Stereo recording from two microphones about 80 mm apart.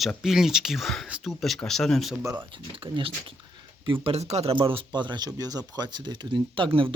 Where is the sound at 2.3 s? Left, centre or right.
Right.